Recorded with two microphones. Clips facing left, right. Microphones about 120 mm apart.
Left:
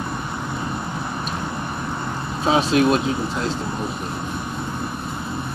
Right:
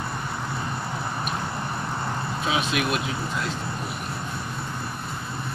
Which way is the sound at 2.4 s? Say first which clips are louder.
Left 9 dB; 35° left (ahead or behind).